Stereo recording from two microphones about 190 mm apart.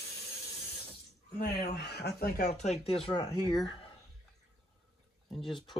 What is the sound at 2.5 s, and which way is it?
Speech, 35° left (ahead or behind).